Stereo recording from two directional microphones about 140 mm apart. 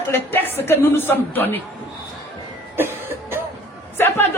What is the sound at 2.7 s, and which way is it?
Cough, 15° right (ahead or behind).